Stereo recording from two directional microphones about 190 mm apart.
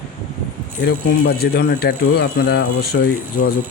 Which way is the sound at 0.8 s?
55° left (ahead or behind).